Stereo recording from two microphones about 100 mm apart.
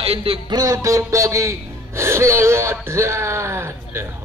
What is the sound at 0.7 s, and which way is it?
Speech, 30° right (ahead or behind).